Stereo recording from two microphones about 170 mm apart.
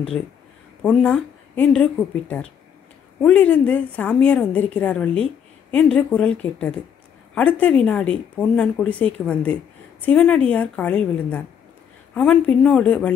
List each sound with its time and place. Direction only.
0.8 s speech: 5° left (ahead or behind)